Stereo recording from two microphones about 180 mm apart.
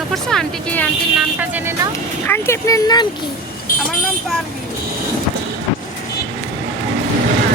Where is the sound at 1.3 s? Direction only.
10° right (ahead or behind).